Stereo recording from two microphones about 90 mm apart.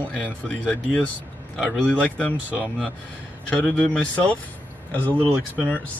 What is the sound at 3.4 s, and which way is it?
Speech, 15° left (ahead or behind).